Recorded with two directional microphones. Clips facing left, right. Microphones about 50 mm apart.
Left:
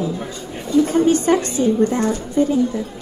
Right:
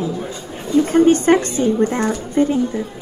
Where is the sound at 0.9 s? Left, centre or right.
Right.